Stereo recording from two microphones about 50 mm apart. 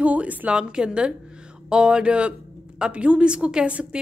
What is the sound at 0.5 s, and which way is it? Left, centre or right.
A woman's voice, centre.